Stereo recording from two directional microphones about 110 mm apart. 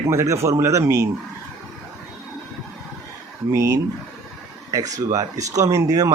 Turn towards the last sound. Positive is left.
turn(degrees=-35)  # may be behind; listen again after turning